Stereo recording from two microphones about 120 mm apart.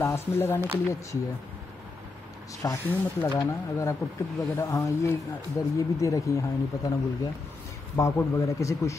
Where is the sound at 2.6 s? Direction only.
25° left (ahead or behind).